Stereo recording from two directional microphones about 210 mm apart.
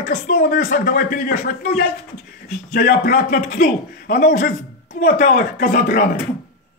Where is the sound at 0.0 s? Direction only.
40° left (ahead or behind).